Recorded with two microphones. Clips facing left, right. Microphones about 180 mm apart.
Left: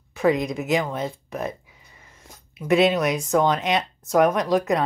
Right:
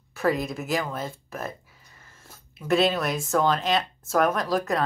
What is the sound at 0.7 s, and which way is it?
Speech, 20° left (ahead or behind).